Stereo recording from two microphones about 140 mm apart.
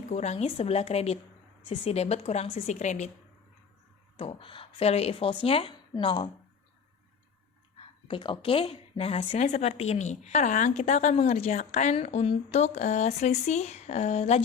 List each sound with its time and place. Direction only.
0.1 s a woman's voice: 55° left (ahead or behind)
4.2 s speech: 40° left (ahead or behind)
7.8 s a woman's voice: 35° left (ahead or behind)